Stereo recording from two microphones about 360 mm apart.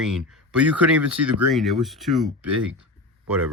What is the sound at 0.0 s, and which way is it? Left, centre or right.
Speech, centre.